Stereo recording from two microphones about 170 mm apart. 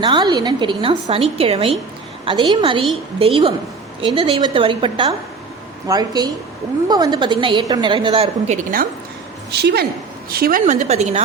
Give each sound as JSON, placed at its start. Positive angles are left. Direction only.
{"t": 0.0, "sound": "a woman's voice", "side_deg": -25}
{"t": 8.4, "sound": "a woman's voice", "side_deg": -55}
{"t": 9.5, "sound": "a woman's voice", "side_deg": -75}
{"t": 10.3, "sound": "a woman's voice", "side_deg": -60}
{"t": 10.7, "sound": "speech", "side_deg": -40}